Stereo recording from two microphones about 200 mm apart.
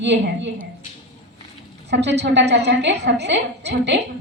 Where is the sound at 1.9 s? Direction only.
60° right (ahead or behind).